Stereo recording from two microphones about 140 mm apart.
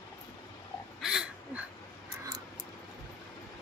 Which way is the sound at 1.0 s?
5° right (ahead or behind).